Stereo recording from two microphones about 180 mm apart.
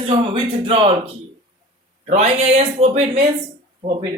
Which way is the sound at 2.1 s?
35° right (ahead or behind).